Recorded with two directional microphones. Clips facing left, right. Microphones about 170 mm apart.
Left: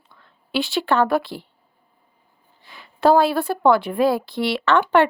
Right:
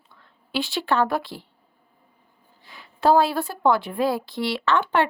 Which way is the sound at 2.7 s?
65° left (ahead or behind).